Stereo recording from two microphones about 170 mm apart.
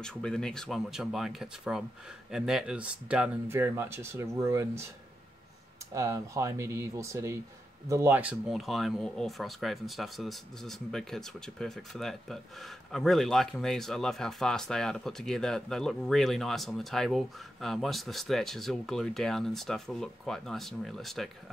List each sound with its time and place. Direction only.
0.0 s speech: 5° left (ahead or behind); by 4.8 s 15° right (ahead or behind)
5.9 s speech: 20° right (ahead or behind); by 21.3 s centre (ahead or behind)